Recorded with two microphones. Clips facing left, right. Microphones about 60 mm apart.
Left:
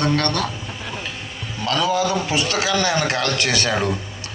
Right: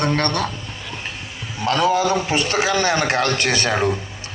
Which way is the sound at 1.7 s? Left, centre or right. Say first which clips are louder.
Right 2 dB; right.